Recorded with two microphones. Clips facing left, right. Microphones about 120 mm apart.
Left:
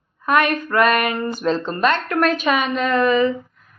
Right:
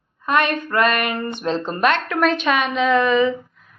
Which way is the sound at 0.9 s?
Centre (ahead or behind).